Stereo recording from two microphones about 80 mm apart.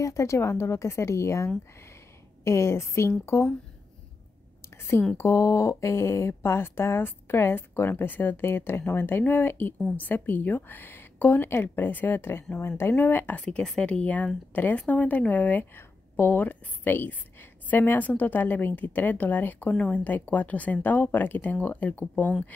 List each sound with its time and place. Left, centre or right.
0.0 s speech: left
5.1 s speech: left